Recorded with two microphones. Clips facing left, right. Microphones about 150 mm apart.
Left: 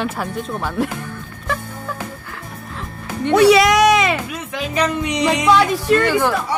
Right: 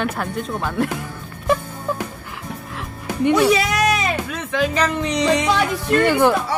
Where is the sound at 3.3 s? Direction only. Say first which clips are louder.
Left 7 dB; 85° left.